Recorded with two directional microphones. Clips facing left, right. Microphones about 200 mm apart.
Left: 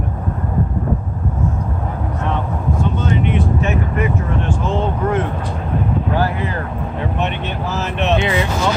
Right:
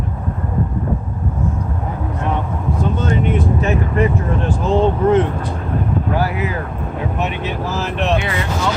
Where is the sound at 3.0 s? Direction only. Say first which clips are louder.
Right 2 dB; 40° right (ahead or behind).